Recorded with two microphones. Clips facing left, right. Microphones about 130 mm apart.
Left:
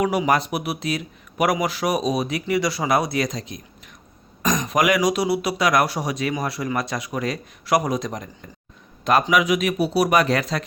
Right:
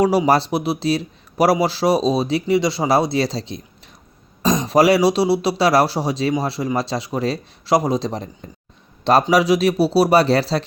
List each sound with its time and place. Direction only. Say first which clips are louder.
0.0 s speech: right 4 dB; 35° right (ahead or behind)
9.3 s speech: right 4 dB; 35° right (ahead or behind)